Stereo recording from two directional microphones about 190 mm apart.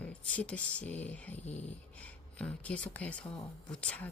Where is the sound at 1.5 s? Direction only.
35° left (ahead or behind).